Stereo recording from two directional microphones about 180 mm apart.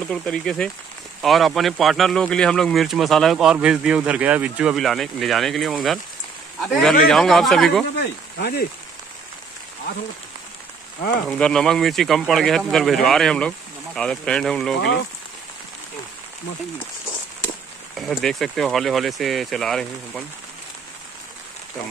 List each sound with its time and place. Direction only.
0.1 s speech: 5° left (ahead or behind)
8.0 s speech: 65° left (ahead or behind)
11.2 s speech: 5° left (ahead or behind)
17.9 s speech: centre (ahead or behind)